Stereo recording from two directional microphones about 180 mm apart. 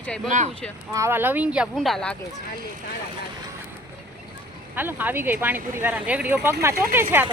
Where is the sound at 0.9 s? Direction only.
15° right (ahead or behind); by 2.1 s centre (ahead or behind).